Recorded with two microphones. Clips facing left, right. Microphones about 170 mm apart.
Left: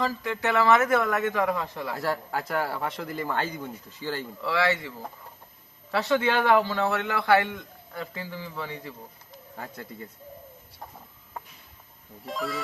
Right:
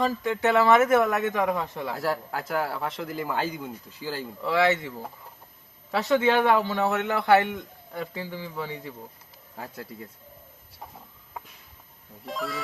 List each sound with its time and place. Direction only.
0.0 s a man's voice: 25° right (ahead or behind)
1.9 s speech: centre (ahead or behind)
4.5 s a man's voice: 20° right (ahead or behind)
5.9 s a man's voice: 20° right (ahead or behind)
9.6 s speech: 5° right (ahead or behind)
12.2 s speech: centre (ahead or behind)